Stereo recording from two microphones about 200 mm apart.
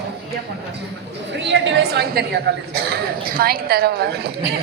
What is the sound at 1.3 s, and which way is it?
Speech, 65° right (ahead or behind).